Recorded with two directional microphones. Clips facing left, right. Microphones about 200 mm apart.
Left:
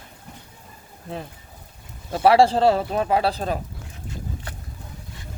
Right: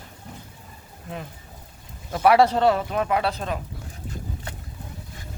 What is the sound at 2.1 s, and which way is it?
Speech, 30° left (ahead or behind).